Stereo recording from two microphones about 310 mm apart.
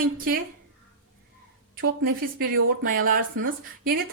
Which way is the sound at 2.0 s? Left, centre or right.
Right.